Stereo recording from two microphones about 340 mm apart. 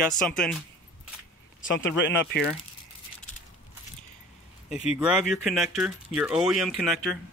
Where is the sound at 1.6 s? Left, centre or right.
Left.